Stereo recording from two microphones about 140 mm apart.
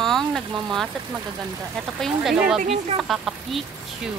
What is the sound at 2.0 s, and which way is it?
Speech, 5° right (ahead or behind).